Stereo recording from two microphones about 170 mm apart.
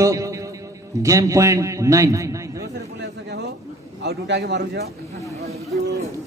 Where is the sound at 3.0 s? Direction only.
80° right.